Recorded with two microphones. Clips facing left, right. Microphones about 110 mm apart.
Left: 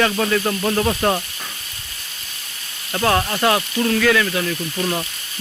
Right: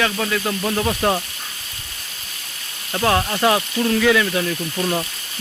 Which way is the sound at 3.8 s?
15° right (ahead or behind).